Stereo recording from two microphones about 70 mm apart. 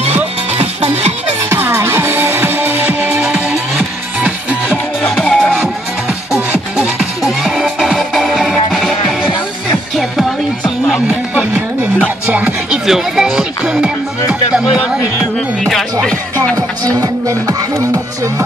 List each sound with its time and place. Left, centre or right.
1.7 s music: right
3.1 s music: centre
5.2 s music: centre
6.8 s music: centre
12.3 s music: right
12.8 s music: centre
15.6 s music: centre
16.5 s speech: right